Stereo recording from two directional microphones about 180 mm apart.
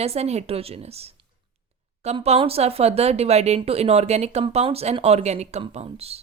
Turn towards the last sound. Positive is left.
turn(degrees=-35)  # may be behind; listen again after turning